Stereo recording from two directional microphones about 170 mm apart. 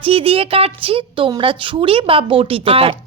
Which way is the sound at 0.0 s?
35° right (ahead or behind).